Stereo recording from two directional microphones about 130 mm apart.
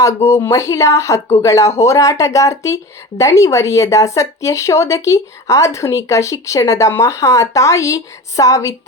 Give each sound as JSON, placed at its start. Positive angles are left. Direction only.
{"t": 0.0, "sound": "speech", "side_deg": 20}